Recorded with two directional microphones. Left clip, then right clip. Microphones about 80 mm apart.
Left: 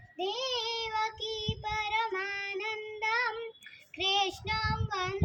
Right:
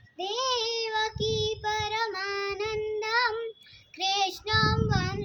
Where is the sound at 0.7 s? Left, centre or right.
Right.